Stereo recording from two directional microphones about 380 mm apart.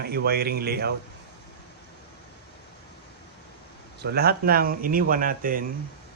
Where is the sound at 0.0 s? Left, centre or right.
Right.